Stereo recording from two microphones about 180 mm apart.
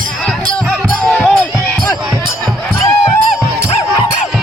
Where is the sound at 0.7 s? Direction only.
5° left (ahead or behind).